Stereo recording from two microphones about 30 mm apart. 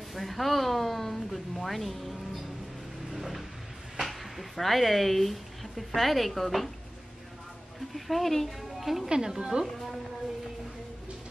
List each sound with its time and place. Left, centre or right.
0.1 s speech: centre
3.1 s a sound: centre
4.0 s speech: centre
7.9 s speech: centre
8.5 s a woman's voice: centre
9.3 s a woman's voice: centre